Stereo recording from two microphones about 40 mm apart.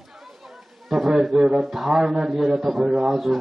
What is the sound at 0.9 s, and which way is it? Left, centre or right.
Speech, centre.